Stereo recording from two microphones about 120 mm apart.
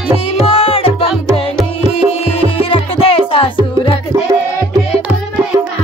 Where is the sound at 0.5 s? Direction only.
50° left (ahead or behind).